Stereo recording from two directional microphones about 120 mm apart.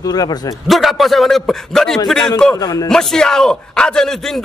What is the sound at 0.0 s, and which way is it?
Speech, 35° left (ahead or behind).